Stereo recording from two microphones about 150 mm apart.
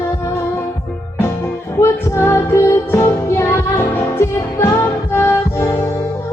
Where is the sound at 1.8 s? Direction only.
15° left (ahead or behind).